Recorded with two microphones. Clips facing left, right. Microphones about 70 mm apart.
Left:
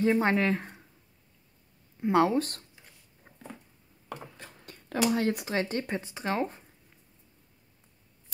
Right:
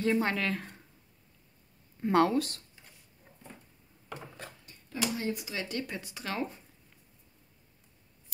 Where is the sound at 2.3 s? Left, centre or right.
Left.